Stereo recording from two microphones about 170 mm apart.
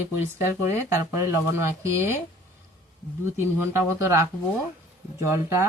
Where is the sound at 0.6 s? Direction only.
15° right (ahead or behind).